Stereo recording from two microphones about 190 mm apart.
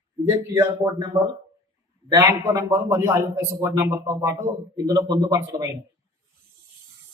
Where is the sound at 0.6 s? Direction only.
15° right (ahead or behind).